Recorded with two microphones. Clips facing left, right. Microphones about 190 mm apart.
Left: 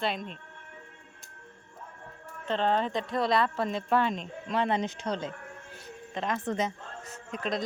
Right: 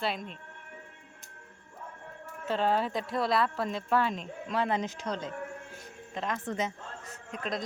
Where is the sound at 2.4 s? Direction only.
5° right (ahead or behind).